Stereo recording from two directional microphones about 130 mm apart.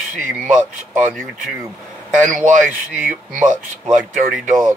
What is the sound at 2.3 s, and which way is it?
Speech, 80° right.